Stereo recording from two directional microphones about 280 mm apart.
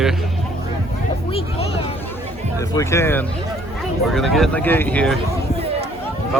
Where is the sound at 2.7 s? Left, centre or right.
Centre.